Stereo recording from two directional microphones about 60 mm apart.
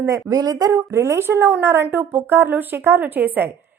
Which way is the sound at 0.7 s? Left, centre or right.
Right.